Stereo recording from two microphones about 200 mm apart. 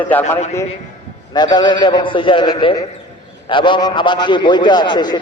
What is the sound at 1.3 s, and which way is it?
A man's voice, 20° left (ahead or behind).